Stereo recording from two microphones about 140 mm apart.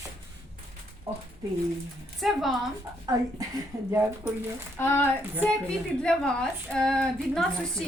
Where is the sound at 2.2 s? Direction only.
Centre (ahead or behind).